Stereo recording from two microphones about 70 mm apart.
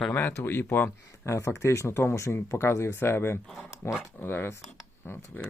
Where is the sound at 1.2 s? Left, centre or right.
Left.